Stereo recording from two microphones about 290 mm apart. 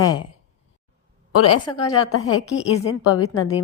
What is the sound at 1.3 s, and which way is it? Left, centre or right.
Speech, left.